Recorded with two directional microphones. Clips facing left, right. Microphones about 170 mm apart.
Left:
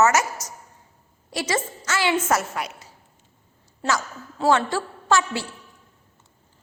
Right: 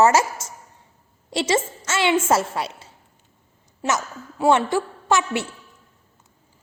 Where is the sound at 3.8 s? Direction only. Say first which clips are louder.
Right 1 dB; 15° right (ahead or behind).